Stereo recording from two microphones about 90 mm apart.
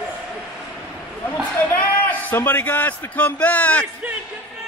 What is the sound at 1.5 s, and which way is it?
A man's voice, 15° left (ahead or behind).